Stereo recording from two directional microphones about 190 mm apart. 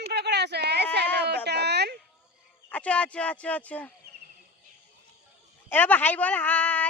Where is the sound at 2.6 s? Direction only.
5° left (ahead or behind).